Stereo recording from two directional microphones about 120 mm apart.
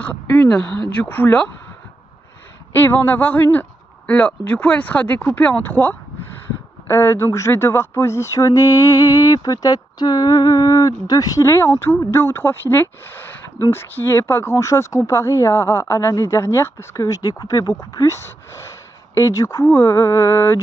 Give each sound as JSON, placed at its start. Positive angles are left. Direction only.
{"t": 0.0, "sound": "speech", "side_deg": 10}
{"t": 2.7, "sound": "speech", "side_deg": 15}